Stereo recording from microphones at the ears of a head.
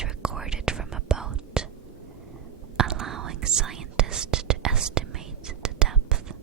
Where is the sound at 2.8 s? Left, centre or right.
Right.